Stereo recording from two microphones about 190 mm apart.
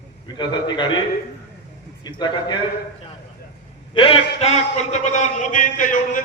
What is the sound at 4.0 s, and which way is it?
A man's voice, 30° left (ahead or behind).